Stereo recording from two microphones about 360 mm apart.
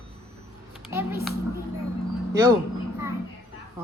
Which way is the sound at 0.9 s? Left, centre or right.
Centre.